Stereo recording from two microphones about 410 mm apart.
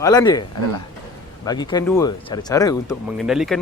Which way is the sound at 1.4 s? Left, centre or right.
Centre.